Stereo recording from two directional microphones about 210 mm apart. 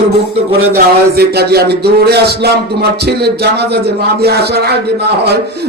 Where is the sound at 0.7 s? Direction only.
50° right (ahead or behind).